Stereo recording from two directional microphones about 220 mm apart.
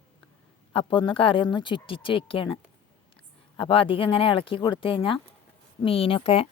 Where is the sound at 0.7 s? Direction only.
25° left (ahead or behind).